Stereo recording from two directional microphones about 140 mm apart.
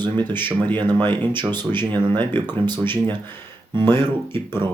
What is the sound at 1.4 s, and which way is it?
Speech, 35° right (ahead or behind).